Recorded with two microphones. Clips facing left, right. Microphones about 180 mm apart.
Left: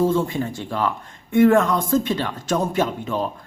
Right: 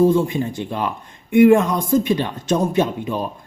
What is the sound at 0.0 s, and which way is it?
A man's voice, 15° right (ahead or behind).